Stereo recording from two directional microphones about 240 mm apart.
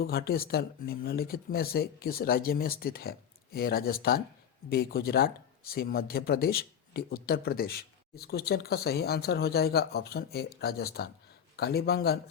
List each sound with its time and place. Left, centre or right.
0.0 s speech: left